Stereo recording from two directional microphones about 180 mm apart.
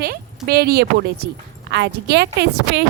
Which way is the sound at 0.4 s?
60° right (ahead or behind).